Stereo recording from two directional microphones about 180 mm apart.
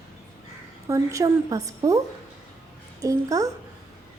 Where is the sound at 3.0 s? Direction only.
20° right (ahead or behind).